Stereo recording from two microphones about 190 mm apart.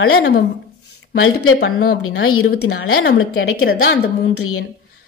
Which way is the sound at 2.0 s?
90° left.